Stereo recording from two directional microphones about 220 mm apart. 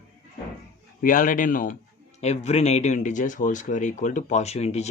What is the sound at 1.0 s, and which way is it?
Speech, 35° left (ahead or behind).